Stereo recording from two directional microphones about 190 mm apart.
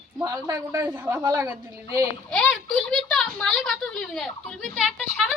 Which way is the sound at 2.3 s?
5° left (ahead or behind).